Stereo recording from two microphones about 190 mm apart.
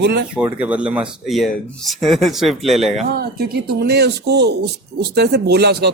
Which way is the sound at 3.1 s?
55° right (ahead or behind).